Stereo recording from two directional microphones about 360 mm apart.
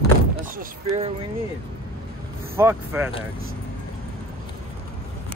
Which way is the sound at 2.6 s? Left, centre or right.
Centre.